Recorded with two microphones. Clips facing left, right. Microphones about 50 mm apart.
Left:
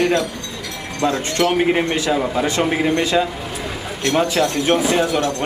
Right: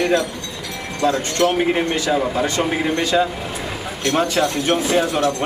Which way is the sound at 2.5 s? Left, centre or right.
Centre.